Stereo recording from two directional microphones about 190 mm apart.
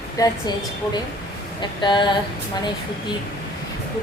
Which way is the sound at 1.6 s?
25° left (ahead or behind).